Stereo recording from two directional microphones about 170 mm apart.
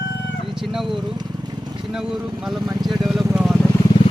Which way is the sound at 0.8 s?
30° right (ahead or behind).